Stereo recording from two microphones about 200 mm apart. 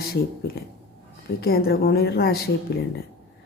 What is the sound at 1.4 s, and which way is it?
Speech, 50° left (ahead or behind).